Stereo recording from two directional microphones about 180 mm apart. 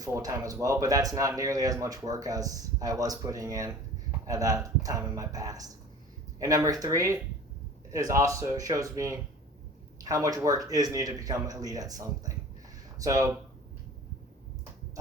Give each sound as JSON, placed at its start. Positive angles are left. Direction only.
{"t": 0.0, "sound": "speech", "side_deg": -20}